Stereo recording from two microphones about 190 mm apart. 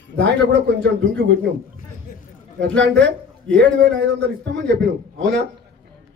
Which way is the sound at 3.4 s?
65° right (ahead or behind).